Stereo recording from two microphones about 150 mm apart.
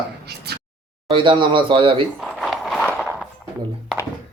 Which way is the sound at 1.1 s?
35° right (ahead or behind).